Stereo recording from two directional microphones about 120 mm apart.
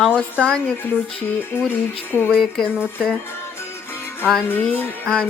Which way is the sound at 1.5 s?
15° left (ahead or behind).